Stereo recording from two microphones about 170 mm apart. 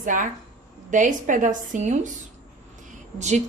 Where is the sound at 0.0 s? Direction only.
50° right (ahead or behind).